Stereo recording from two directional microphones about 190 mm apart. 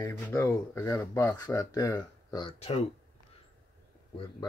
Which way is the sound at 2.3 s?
30° left (ahead or behind).